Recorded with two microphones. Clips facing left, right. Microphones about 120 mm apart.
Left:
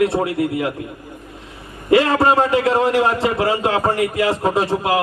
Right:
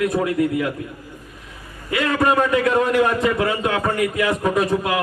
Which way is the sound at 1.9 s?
30° left (ahead or behind).